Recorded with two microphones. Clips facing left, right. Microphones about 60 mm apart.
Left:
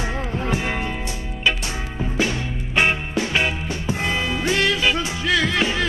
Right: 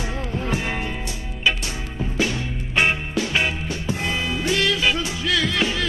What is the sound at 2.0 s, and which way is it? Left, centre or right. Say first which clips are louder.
Music: left 1 dB; centre.